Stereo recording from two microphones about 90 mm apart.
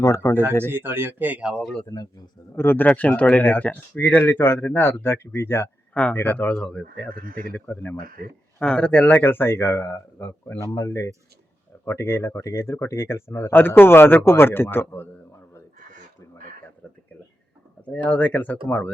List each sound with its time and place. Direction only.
0.0 s speech: 35° left (ahead or behind)
0.6 s speech: 25° right (ahead or behind)
1.5 s speech: 5° left (ahead or behind)
1.9 s speech: 45° left (ahead or behind)
2.6 s speech: 25° left (ahead or behind)
5.9 s speech: 15° left (ahead or behind)
10.6 s speech: 35° left (ahead or behind)
17.8 s speech: 15° left (ahead or behind)